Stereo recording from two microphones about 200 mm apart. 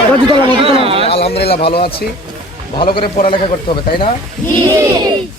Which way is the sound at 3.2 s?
25° left (ahead or behind).